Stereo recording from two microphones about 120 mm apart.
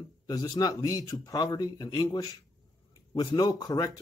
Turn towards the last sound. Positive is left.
turn(degrees=35)  # may be behind; listen again after turning